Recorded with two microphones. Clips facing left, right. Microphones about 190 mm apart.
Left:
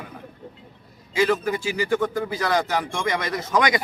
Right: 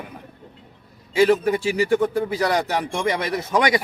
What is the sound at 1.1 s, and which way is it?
A man's voice, 30° right (ahead or behind).